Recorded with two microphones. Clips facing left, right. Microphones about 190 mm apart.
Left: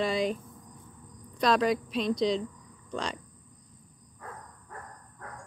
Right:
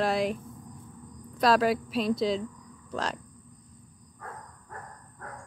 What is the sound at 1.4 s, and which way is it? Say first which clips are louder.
Speech: right 2 dB; 5° right (ahead or behind).